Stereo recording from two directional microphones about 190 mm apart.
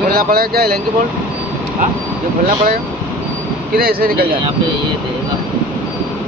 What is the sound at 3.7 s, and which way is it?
Speech, 55° right (ahead or behind).